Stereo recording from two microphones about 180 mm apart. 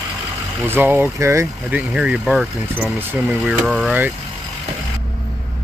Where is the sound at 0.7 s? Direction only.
10° right (ahead or behind).